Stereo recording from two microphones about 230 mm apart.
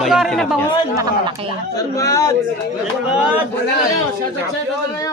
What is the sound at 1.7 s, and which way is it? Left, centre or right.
Speech, centre.